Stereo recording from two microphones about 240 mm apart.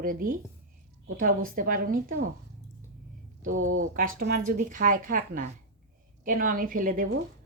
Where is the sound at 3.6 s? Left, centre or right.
Right.